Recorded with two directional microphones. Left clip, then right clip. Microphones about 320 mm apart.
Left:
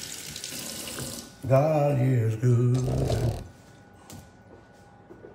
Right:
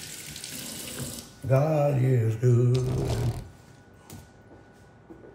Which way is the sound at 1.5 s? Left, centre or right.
Centre.